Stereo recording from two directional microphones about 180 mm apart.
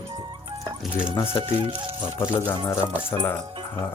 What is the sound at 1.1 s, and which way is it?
Speech, 15° left (ahead or behind).